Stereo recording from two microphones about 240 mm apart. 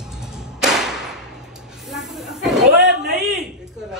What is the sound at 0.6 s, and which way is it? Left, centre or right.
Thump, centre.